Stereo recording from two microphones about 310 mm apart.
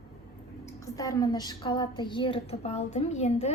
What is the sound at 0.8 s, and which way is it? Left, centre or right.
A woman's voice, centre.